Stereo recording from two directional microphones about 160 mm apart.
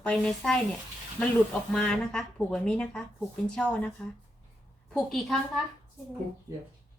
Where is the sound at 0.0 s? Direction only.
5° left (ahead or behind).